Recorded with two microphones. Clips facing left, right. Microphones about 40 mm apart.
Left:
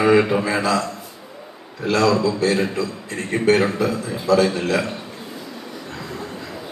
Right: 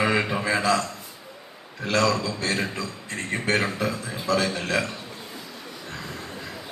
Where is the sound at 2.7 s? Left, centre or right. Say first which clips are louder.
Left 7 dB; right.